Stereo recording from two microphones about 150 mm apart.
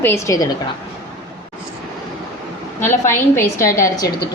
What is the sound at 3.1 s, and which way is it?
Speech, 15° left (ahead or behind).